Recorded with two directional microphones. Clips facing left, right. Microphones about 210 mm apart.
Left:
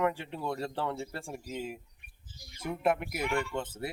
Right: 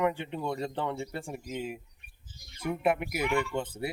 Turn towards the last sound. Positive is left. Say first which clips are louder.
# right 3 dB
turn(degrees=-5)  # may be behind; listen again after turning